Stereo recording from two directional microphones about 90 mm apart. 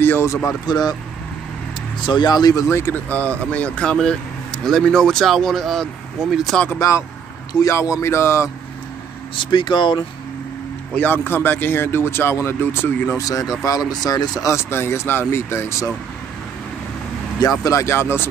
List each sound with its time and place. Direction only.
0.0 s speech: 25° left (ahead or behind)
0.7 s speech: 50° left (ahead or behind)
2.0 s speech: 55° left (ahead or behind)
2.7 s speech: 30° left (ahead or behind)
3.1 s speech: 15° left (ahead or behind)
7.6 s speech: 35° left (ahead or behind)
9.4 s speech: 65° left (ahead or behind)
11.0 s speech: 20° left (ahead or behind)
13.2 s speech: 40° left (ahead or behind)
14.5 s speech: 30° left (ahead or behind)
17.6 s speech: 30° left (ahead or behind)